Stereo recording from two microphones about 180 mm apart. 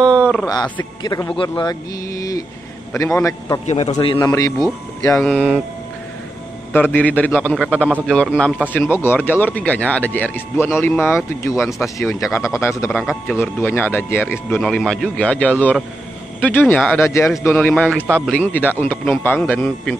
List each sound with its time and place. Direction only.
0.0 s a sound: 20° right (ahead or behind)
1.0 s speech: 20° left (ahead or behind)
1.5 s mantra: 20° left (ahead or behind)
3.2 s speech: 20° left (ahead or behind)
3.6 s a man's voice: 35° left (ahead or behind)
3.9 s speech: 25° left (ahead or behind)
5.1 s speech: centre (ahead or behind)
6.7 s speech: 10° left (ahead or behind)
12.9 s speech: centre (ahead or behind)
13.4 s speech: 10° left (ahead or behind)
17.8 s speech: 10° right (ahead or behind)
18.1 s speech: 5° left (ahead or behind)